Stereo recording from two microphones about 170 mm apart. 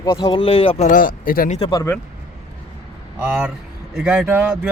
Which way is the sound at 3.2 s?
10° right (ahead or behind).